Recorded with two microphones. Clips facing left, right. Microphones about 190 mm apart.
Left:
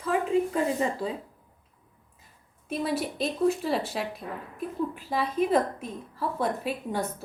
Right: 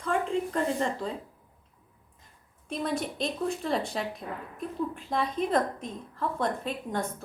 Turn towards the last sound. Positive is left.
turn(degrees=5)  # may be behind; listen again after turning